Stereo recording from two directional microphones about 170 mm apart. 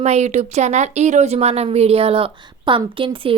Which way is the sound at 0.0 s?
40° right (ahead or behind).